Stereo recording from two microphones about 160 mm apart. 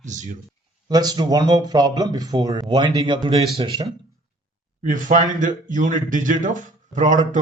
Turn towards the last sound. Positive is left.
turn(degrees=-50)  # may be behind; listen again after turning